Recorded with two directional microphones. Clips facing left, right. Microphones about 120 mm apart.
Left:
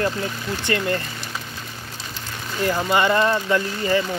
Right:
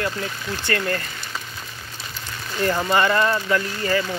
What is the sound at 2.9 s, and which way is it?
Speech, 20° left (ahead or behind).